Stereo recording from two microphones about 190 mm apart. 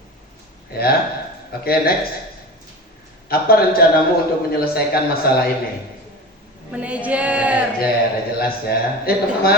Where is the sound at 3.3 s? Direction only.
55° left (ahead or behind).